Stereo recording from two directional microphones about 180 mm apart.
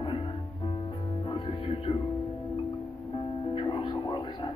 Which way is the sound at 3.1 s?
30° left (ahead or behind).